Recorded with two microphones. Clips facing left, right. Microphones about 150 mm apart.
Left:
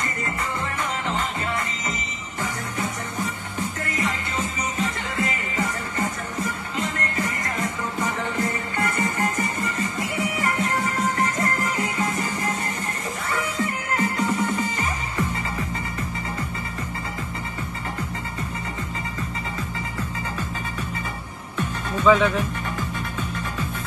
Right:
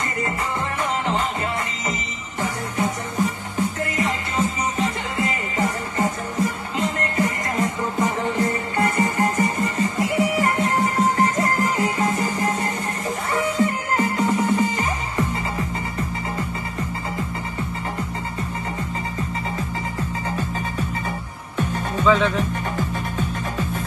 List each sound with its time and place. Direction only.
2.4 s music: 30° right (ahead or behind)
22.0 s speech: 15° left (ahead or behind)
22.8 s music: 40° right (ahead or behind)